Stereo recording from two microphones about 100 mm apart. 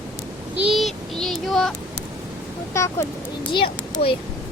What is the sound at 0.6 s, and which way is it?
Speech, centre (ahead or behind).